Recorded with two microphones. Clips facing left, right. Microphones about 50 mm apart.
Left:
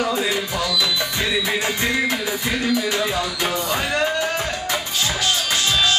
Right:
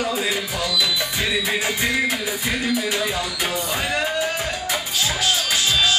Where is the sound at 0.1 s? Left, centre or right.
Centre.